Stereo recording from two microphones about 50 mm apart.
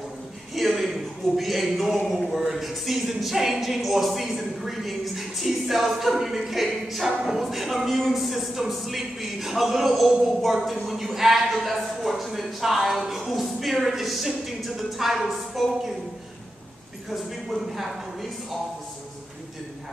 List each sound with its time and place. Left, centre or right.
0.6 s a sound: centre
2.0 s a man's voice: centre
17.1 s a man's voice: centre